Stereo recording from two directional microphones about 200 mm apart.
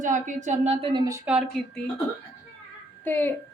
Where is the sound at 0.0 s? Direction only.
40° right (ahead or behind); by 1.2 s 20° right (ahead or behind).